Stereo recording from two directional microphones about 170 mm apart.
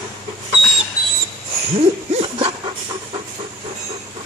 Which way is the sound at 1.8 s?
35° right (ahead or behind).